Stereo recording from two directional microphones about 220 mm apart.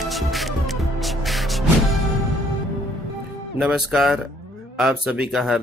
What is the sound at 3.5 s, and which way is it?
Speech, centre (ahead or behind).